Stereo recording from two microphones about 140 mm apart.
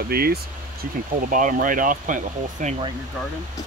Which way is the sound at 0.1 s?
90° right.